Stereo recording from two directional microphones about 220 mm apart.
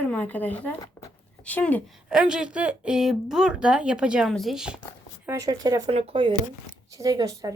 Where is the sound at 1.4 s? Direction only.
5° left (ahead or behind).